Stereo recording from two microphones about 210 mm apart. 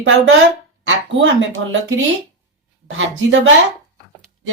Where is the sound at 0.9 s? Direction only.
65° right (ahead or behind).